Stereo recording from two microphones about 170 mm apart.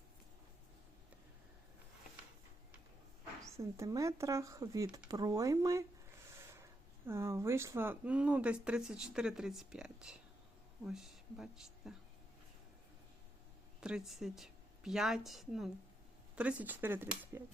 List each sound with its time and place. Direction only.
3.4 s speech: 20° right (ahead or behind)
5.0 s a sound: 20° right (ahead or behind)
7.1 s a woman's voice: 15° right (ahead or behind)
13.8 s a woman's voice: 5° right (ahead or behind)